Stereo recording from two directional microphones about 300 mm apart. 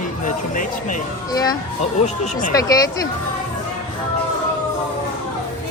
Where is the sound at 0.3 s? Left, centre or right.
Left.